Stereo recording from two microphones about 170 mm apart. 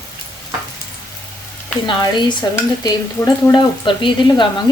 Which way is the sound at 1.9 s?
25° left (ahead or behind).